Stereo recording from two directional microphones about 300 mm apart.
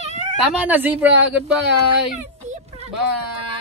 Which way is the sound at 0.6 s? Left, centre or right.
Centre.